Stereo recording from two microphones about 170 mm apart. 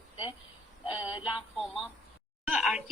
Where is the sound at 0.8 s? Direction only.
5° right (ahead or behind).